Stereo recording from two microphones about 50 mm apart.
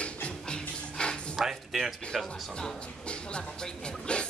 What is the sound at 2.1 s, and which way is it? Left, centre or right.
Speech, centre.